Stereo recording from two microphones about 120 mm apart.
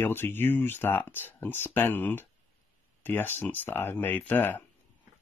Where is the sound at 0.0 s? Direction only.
15° left (ahead or behind).